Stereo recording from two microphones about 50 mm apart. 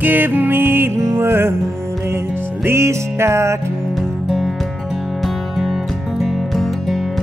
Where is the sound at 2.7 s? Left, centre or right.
Right.